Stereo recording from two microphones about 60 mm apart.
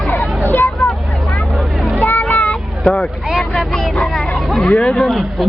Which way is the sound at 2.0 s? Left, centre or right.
Left.